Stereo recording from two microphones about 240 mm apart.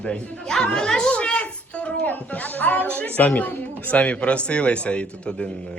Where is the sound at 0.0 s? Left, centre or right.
Centre.